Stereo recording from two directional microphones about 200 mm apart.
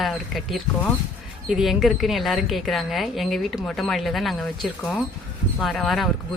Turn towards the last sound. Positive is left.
turn(degrees=0)  # may be behind; listen again after turning